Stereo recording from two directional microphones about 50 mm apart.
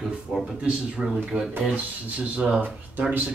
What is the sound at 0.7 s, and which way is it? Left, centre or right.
Speech, centre.